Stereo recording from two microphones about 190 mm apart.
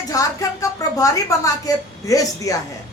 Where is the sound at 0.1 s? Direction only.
20° left (ahead or behind).